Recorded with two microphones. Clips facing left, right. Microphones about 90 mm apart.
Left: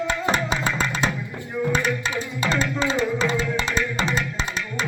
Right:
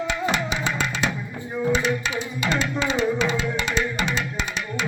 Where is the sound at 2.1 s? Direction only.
35° left (ahead or behind).